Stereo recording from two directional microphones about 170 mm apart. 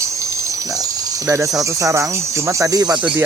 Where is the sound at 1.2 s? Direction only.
20° right (ahead or behind).